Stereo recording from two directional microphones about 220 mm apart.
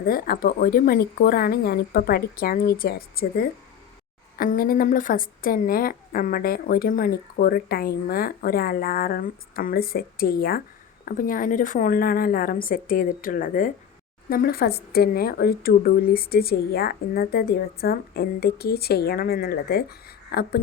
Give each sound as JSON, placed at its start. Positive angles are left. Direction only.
{"t": 0.0, "sound": "a woman's voice", "side_deg": 40}